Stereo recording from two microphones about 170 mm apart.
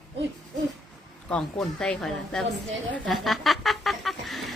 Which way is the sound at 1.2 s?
5° left (ahead or behind).